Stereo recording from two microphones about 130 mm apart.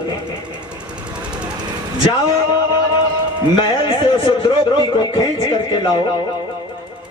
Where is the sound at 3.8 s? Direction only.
40° left (ahead or behind).